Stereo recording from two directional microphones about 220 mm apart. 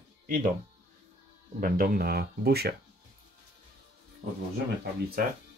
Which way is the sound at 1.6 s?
40° right (ahead or behind).